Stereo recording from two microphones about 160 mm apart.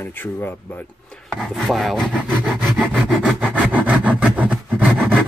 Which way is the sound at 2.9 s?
Centre (ahead or behind).